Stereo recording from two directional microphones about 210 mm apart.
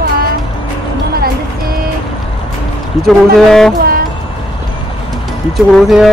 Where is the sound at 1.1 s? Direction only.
45° right (ahead or behind).